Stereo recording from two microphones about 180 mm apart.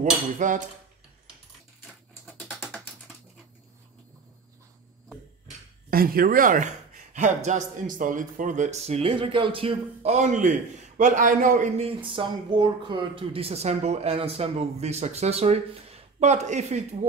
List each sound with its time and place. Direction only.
0.0 s speech: 45° right (ahead or behind)
2.2 s ratchet: 10° left (ahead or behind)
5.9 s speech: 55° right (ahead or behind)
12.0 s speech: 30° right (ahead or behind)